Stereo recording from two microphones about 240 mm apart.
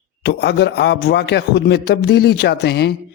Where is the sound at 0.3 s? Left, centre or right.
Left.